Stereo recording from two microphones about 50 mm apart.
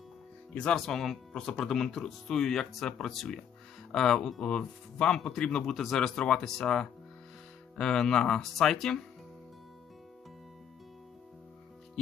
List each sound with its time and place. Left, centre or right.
0.5 s speech: left
0.8 s speech: centre